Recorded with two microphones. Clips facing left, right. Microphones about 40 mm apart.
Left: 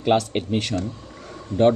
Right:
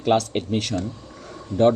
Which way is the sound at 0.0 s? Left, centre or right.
Centre.